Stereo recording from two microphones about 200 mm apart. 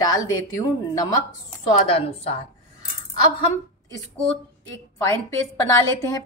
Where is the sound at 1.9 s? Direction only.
30° left (ahead or behind).